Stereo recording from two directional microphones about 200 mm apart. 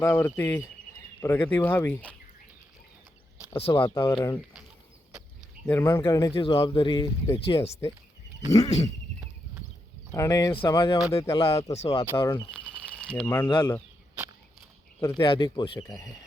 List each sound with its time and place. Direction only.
0.0 s speech: 10° left (ahead or behind)
3.6 s speech: 25° left (ahead or behind)
5.6 s speech: 10° left (ahead or behind)
6.3 s speech: 25° left (ahead or behind)
7.3 s speech: 30° left (ahead or behind)
10.1 s speech: 15° left (ahead or behind)
11.3 s speech: 30° left (ahead or behind)
12.1 s speech: 15° left (ahead or behind)
12.5 s a sound: 5° left (ahead or behind)
13.2 s speech: 10° left (ahead or behind)
13.5 s speech: 25° left (ahead or behind)
15.2 s speech: 25° left (ahead or behind)